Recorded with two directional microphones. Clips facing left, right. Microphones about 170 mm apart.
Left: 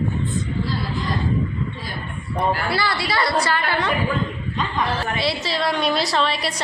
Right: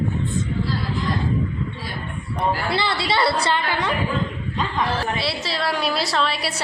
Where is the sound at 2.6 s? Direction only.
25° right (ahead or behind).